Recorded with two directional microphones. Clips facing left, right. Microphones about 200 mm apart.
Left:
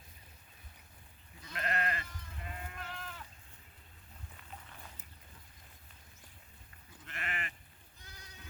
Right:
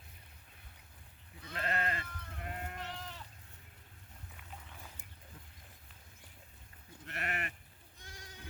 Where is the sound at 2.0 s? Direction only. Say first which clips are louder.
Right 3 dB; 60° right (ahead or behind).